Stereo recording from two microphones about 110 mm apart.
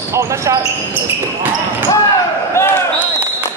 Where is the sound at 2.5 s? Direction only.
20° left (ahead or behind).